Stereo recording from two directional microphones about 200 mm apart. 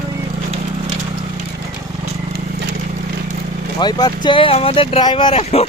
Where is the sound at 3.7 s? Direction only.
20° left (ahead or behind).